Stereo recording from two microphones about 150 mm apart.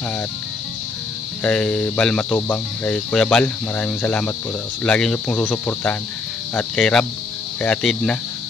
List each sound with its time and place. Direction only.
1.4 s speech: 10° left (ahead or behind)